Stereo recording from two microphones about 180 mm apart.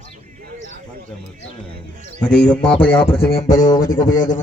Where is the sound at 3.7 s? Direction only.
20° left (ahead or behind).